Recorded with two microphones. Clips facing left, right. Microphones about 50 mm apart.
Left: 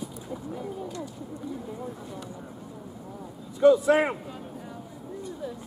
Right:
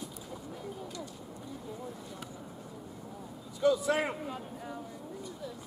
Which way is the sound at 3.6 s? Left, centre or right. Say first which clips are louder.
Left 9 dB; left.